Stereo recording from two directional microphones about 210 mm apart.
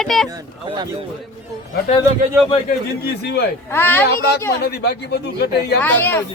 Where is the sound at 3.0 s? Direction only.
50° left (ahead or behind).